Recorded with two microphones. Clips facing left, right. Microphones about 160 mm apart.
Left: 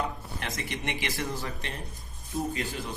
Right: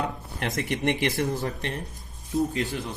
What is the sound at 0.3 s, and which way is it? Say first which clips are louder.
Speech: right 7 dB; 55° right (ahead or behind).